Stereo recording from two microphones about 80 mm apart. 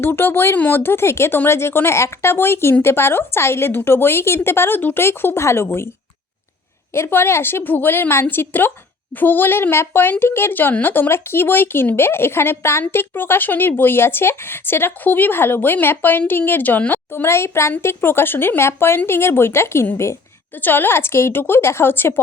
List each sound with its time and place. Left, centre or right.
0.0 s speech: left
6.9 s speech: left